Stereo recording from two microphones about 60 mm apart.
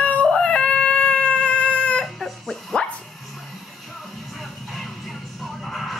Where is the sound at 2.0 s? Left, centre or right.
Centre.